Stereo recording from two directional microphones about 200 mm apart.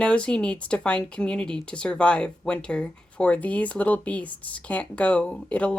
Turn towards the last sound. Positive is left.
turn(degrees=5)  # may be behind; listen again after turning